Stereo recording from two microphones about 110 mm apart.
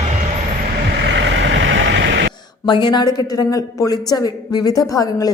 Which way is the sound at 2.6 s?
45° left (ahead or behind).